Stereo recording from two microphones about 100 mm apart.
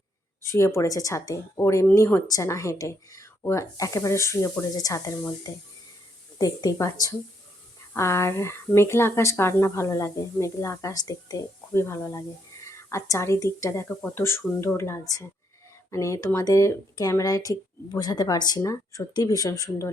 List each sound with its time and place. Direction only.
0.4 s speech: 30° left (ahead or behind)
2.2 s speech: 35° left (ahead or behind)